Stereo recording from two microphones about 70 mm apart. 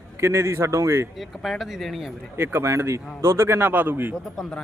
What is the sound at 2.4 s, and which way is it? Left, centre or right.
A man's voice, right.